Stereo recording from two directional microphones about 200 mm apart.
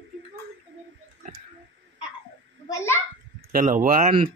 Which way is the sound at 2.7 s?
15° left (ahead or behind).